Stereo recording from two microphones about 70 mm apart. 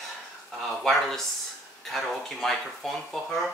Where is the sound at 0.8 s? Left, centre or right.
Centre.